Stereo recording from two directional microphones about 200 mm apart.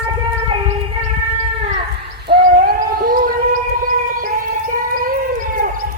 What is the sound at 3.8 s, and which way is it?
Siren, 45° right (ahead or behind).